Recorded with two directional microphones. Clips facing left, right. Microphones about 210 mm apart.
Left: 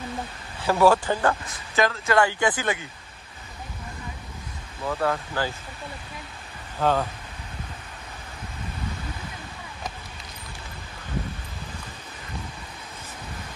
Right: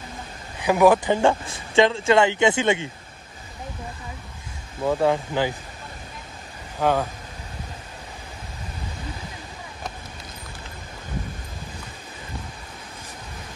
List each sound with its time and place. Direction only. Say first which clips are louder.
0.6 s speech: right 2 dB; 15° right (ahead or behind)
4.8 s speech: right 5 dB; 20° right (ahead or behind)
6.8 s speech: right 2 dB; 10° right (ahead or behind)